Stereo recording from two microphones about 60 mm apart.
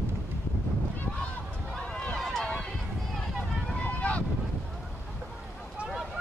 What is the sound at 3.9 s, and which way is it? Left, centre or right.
Boat, left.